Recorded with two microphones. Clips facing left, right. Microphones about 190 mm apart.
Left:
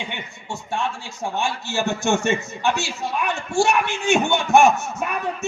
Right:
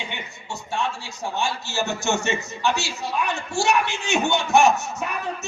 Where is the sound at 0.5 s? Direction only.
55° left (ahead or behind).